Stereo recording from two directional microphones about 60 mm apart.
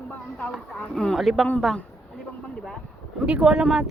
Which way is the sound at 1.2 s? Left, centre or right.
Centre.